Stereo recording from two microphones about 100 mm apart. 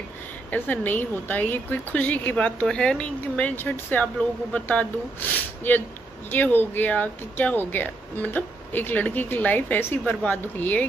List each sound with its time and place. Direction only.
0.5 s speech: 15° left (ahead or behind)